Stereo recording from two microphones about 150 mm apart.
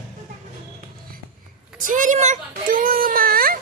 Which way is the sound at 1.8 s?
60° right (ahead or behind).